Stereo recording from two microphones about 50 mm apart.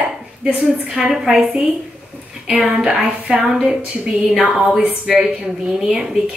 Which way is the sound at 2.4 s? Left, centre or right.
Centre.